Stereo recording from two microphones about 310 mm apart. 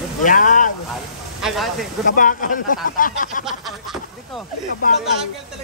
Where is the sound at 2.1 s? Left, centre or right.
Left.